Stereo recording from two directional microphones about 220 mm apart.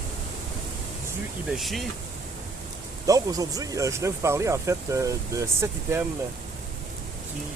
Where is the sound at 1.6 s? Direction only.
Centre (ahead or behind).